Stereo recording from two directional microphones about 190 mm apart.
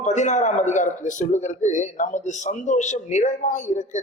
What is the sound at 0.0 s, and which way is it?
A man's voice, 40° left (ahead or behind).